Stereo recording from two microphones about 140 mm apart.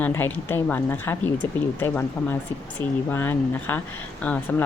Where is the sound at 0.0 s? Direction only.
15° left (ahead or behind).